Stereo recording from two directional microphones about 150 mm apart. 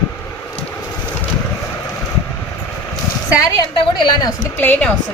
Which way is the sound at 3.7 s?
30° left (ahead or behind).